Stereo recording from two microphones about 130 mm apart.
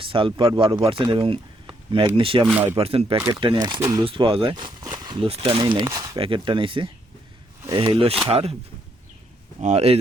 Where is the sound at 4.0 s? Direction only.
45° right (ahead or behind).